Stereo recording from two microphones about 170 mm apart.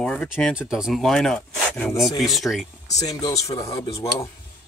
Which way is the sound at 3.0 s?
20° left (ahead or behind).